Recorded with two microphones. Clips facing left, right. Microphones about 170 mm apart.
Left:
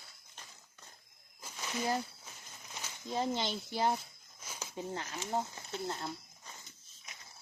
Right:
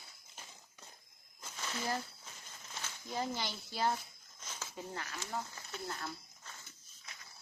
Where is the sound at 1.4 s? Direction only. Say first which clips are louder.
Left 4 dB; 15° left (ahead or behind).